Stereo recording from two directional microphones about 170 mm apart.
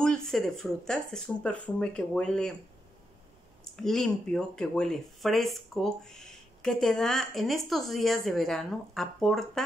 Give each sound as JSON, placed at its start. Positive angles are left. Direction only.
{"t": 0.0, "sound": "speech", "side_deg": 5}
{"t": 3.7, "sound": "speech", "side_deg": 0}